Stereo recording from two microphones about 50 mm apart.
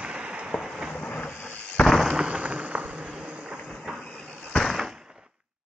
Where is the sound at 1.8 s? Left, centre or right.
Centre.